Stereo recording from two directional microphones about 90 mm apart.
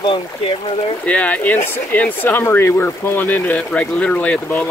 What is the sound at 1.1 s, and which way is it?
Speech, 15° left (ahead or behind).